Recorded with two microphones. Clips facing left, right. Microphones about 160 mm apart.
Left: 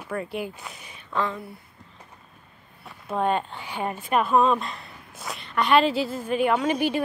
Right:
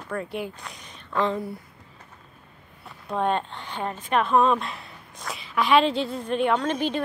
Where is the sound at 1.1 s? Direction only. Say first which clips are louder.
Right 3 dB; 25° right (ahead or behind).